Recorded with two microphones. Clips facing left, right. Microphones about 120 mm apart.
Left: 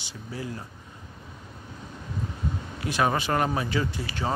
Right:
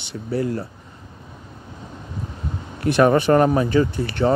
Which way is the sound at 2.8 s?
60° right (ahead or behind).